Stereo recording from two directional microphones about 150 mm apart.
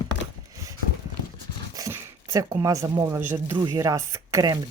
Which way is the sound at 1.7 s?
20° right (ahead or behind).